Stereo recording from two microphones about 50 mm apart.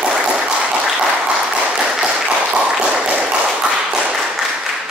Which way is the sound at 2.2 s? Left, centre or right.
Centre.